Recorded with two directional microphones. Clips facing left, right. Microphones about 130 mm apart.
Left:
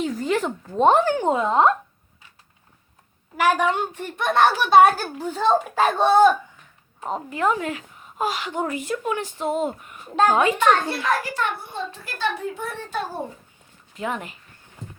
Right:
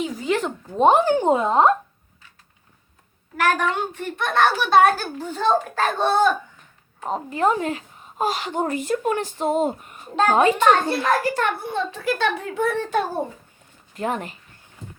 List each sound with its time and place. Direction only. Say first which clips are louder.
0.0 s speech: even; 5° right (ahead or behind)
0.8 s speech: right 1 dB; 15° right (ahead or behind)
3.3 s a child's voice: left 1 dB; 10° left (ahead or behind)
7.3 s speech: right 2 dB; 30° right (ahead or behind); by 11.5 s 45° right (ahead or behind)
11.6 s a child's voice: right 7 dB; 75° right (ahead or behind)
13.9 s speech: right 3 dB; 40° right (ahead or behind)